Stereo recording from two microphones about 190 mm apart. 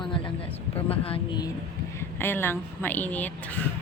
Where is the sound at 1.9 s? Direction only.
10° left (ahead or behind).